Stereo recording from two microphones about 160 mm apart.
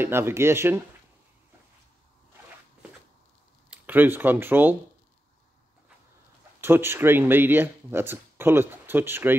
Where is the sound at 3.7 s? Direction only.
10° right (ahead or behind).